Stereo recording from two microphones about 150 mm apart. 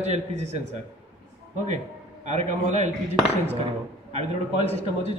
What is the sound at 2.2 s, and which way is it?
Speech, 50° right (ahead or behind).